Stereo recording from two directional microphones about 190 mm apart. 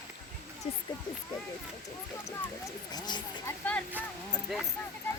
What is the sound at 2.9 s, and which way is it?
Speech, 20° left (ahead or behind).